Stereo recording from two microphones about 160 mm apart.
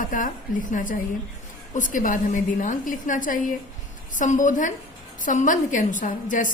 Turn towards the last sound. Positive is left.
turn(degrees=55)  # may be behind; listen again after turning